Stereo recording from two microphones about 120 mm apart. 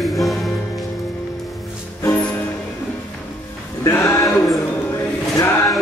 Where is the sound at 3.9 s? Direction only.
25° left (ahead or behind).